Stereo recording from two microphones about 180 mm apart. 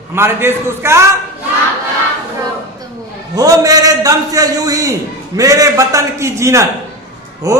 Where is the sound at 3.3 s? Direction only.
20° right (ahead or behind).